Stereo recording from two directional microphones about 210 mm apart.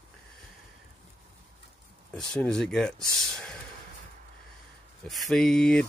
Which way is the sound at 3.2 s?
5° left (ahead or behind).